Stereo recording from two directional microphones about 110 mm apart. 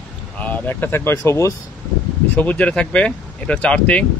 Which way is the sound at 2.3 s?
15° left (ahead or behind).